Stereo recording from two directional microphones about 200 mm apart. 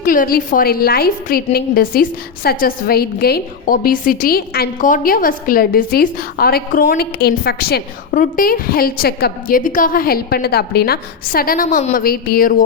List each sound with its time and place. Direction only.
0.0 s a woman's voice: 45° left (ahead or behind)